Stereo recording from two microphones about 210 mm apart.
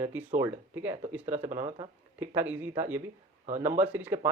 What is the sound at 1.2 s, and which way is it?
Speech, 35° right (ahead or behind).